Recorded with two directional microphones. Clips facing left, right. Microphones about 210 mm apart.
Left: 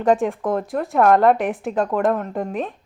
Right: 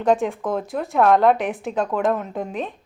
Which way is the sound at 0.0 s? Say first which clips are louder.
Left 1 dB; centre (ahead or behind).